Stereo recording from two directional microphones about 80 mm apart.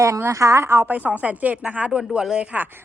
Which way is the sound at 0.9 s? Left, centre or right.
Centre.